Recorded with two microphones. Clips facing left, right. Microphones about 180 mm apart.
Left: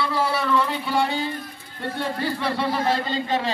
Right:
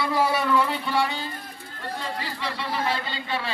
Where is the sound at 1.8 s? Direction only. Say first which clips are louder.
Left 6 dB; 60° left (ahead or behind); by 3.5 s 40° left (ahead or behind).